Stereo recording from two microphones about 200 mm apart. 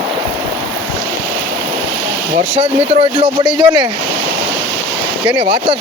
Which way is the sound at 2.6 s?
30° right (ahead or behind).